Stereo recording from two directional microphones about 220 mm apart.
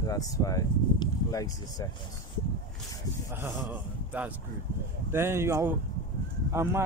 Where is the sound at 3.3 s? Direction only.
10° right (ahead or behind).